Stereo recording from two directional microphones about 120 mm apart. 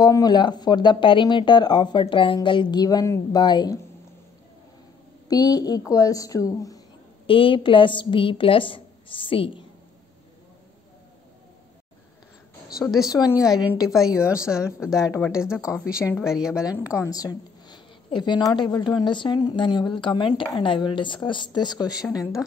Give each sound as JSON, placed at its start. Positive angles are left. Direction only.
{"t": 0.0, "sound": "a woman's voice", "side_deg": 35}
{"t": 5.3, "sound": "a woman's voice", "side_deg": 30}
{"t": 7.2, "sound": "a woman's voice", "side_deg": 45}
{"t": 12.7, "sound": "a woman's voice", "side_deg": -5}
{"t": 16.8, "sound": "a woman's voice", "side_deg": 25}